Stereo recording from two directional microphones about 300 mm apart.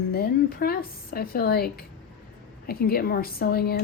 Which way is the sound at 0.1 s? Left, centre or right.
Left.